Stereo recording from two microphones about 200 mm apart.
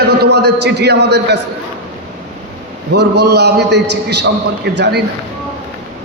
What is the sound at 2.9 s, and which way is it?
A man's voice, 55° right (ahead or behind).